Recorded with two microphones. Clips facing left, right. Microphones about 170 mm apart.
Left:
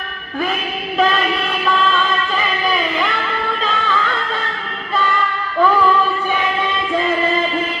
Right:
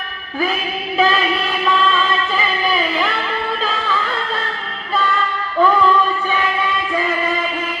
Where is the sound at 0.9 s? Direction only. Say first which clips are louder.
Even; 5° right (ahead or behind).